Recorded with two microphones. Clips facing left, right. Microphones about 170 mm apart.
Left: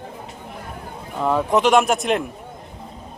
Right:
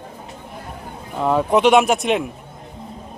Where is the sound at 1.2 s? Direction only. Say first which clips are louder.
Right 2 dB; centre (ahead or behind).